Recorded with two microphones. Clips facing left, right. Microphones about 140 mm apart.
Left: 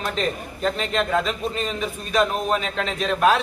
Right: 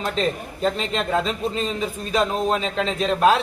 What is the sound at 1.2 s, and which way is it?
A man's voice, 30° right (ahead or behind).